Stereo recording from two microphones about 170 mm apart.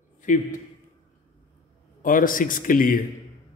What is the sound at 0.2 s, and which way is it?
Speech, 50° left (ahead or behind).